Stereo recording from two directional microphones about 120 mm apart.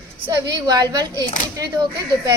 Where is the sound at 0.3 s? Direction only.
35° right (ahead or behind).